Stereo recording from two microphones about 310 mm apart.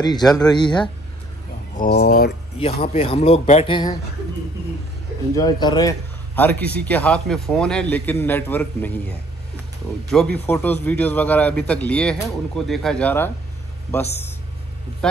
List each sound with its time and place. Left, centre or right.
0.2 s a man's voice: centre
0.5 s speech: centre
1.8 s speech: left
2.6 s a man's voice: left
5.3 s a man's voice: centre
10.4 s a man's voice: centre